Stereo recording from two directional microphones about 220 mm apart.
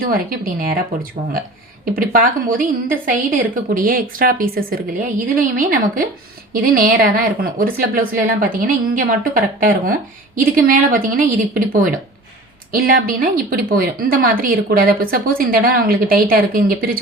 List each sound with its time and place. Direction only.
0.0 s a woman's voice: 40° right (ahead or behind)
2.0 s a woman's voice: 40° right (ahead or behind)